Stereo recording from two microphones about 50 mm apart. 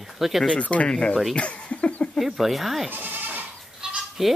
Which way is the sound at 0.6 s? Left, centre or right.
Left.